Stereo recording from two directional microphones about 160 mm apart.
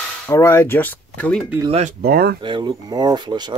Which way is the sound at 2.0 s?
75° right (ahead or behind).